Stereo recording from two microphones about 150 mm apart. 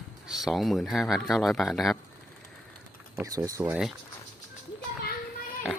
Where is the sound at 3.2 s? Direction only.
25° right (ahead or behind).